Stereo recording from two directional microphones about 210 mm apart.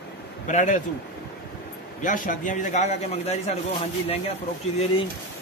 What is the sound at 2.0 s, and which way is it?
Speech, 40° left (ahead or behind).